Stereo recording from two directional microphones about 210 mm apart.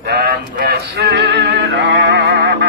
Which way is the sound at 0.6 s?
50° right (ahead or behind).